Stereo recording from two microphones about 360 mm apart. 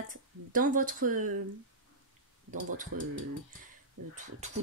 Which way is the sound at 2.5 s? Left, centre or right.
Right.